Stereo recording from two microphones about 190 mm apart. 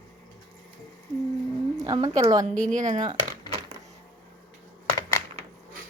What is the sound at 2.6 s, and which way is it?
Speech, 40° right (ahead or behind).